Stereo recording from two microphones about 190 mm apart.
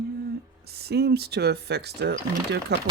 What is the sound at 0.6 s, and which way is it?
Speech, 55° right (ahead or behind).